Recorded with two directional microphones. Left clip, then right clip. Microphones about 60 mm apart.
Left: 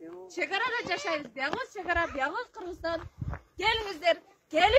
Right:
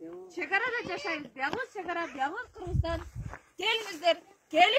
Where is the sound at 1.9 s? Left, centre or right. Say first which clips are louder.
Left 5 dB; left.